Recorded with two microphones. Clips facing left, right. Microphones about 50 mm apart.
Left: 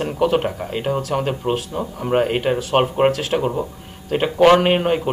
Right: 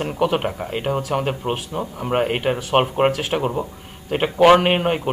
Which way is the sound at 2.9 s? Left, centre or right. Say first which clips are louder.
Left 2 dB; centre.